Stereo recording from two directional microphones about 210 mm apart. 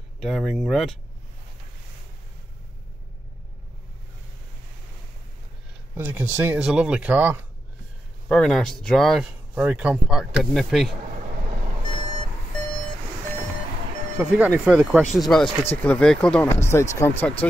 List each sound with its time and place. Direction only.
0.2 s speech: centre (ahead or behind)
5.9 s speech: 10° right (ahead or behind)
8.3 s speech: centre (ahead or behind)
11.1 s vehicle: 40° right (ahead or behind)
14.1 s speech: 10° right (ahead or behind); by 17.5 s 10° left (ahead or behind)